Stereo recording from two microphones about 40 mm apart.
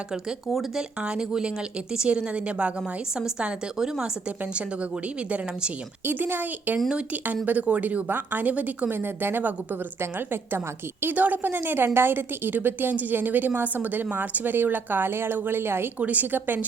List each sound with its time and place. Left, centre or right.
0.4 s speech: centre
0.8 s speech: right
4.5 s a woman's voice: right
6.1 s a woman's voice: right
7.7 s a woman's voice: right
8.9 s a woman's voice: right
11.0 s a woman's voice: right
16.0 s a woman's voice: right
16.2 s a woman's voice: right